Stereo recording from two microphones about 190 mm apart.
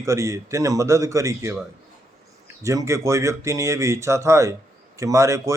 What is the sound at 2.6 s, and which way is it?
A man's voice, 15° right (ahead or behind).